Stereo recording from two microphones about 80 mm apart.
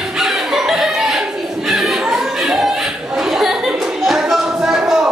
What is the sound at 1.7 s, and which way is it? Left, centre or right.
Music, centre.